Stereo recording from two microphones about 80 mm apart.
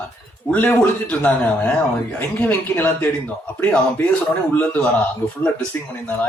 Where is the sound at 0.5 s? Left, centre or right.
Left.